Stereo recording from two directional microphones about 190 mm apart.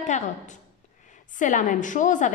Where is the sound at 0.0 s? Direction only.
40° left (ahead or behind).